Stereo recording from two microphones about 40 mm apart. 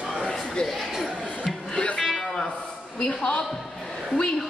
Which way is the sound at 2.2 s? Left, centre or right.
Centre.